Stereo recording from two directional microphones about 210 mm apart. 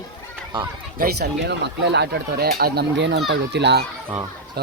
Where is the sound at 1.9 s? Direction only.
50° right (ahead or behind).